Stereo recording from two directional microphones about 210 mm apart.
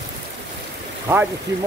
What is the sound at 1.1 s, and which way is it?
Speech, 10° right (ahead or behind).